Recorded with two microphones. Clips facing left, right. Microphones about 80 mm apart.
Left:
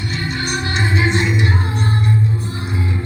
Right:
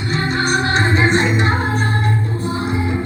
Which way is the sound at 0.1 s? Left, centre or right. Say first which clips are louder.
Right 7 dB; right.